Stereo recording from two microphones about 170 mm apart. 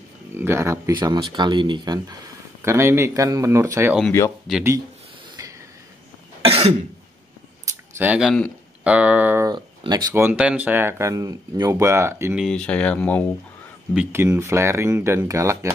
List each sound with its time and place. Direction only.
0.3 s speech: 15° right (ahead or behind)
2.6 s speech: 15° right (ahead or behind)
4.5 s speech: centre (ahead or behind)
5.4 s a sound: 20° right (ahead or behind)
6.4 s cough: 35° right (ahead or behind)
8.0 s speech: 5° right (ahead or behind)
9.5 s speech: 25° right (ahead or behind)
12.4 s speech: 5° left (ahead or behind)
13.9 s speech: 15° right (ahead or behind)